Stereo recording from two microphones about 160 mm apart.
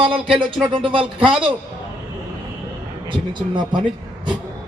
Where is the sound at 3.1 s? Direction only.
30° right (ahead or behind).